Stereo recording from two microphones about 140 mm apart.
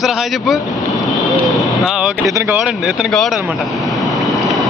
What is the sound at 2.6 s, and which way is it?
Speech, centre (ahead or behind).